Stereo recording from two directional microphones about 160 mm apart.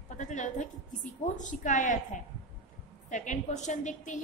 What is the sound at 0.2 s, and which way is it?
A woman's voice, 50° left (ahead or behind).